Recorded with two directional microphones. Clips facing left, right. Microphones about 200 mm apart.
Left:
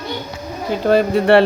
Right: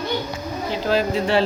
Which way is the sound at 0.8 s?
55° left (ahead or behind).